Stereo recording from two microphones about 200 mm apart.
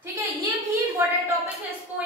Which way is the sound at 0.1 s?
15° right (ahead or behind).